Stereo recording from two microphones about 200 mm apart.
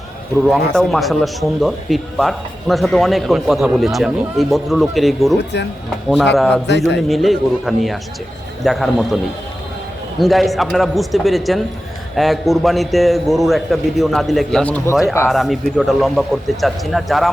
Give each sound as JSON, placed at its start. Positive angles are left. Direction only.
{"t": 0.4, "sound": "speech", "side_deg": 0}
{"t": 5.4, "sound": "a man's voice", "side_deg": 60}
{"t": 6.3, "sound": "speech", "side_deg": 0}
{"t": 6.7, "sound": "a man's voice", "side_deg": 60}
{"t": 7.1, "sound": "speech", "side_deg": 0}
{"t": 10.2, "sound": "speech", "side_deg": 0}
{"t": 15.3, "sound": "speech", "side_deg": 0}